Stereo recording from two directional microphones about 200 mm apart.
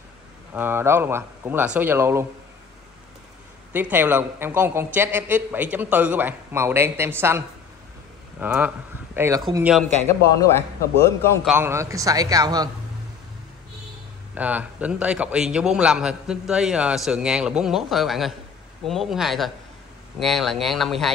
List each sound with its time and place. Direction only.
0.6 s a woman's voice: 10° right (ahead or behind)
3.7 s a woman's voice: 10° right (ahead or behind)
10.0 s a man's voice: 15° left (ahead or behind)
11.4 s a woman's voice: 10° right (ahead or behind)
14.3 s a man's voice: 5° right (ahead or behind)